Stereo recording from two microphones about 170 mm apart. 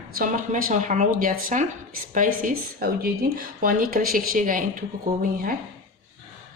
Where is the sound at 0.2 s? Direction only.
50° right (ahead or behind).